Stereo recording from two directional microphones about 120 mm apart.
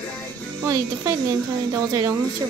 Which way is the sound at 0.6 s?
30° right (ahead or behind).